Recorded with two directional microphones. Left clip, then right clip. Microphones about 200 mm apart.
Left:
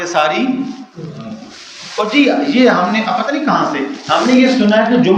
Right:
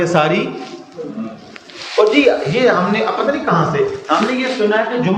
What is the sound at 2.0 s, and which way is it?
A man's voice, 50° left (ahead or behind).